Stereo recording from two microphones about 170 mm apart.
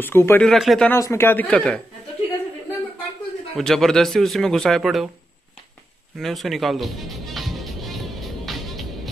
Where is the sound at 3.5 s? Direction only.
Centre (ahead or behind).